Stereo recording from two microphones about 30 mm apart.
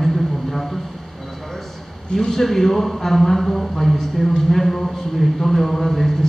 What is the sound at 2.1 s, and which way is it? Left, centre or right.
A man's voice, centre.